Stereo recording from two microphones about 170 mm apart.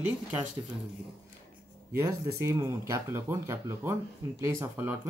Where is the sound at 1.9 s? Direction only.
15° right (ahead or behind).